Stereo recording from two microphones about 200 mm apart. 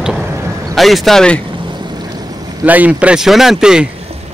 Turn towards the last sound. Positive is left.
turn(degrees=-5)  # may be behind; listen again after turning